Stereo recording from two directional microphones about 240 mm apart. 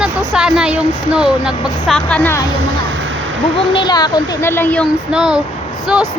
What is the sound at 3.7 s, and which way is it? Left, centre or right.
A woman's voice, centre.